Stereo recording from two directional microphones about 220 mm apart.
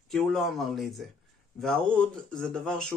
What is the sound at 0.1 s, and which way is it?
Speech, centre (ahead or behind).